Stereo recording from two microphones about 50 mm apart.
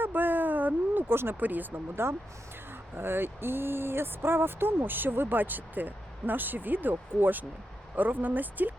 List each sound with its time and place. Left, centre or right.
0.0 s a sound: right
1.4 s speech: right
2.0 s speech: right